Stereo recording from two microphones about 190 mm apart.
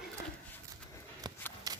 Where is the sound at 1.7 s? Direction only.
20° right (ahead or behind).